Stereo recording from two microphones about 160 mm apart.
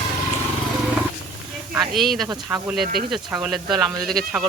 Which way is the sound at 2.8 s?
70° right (ahead or behind).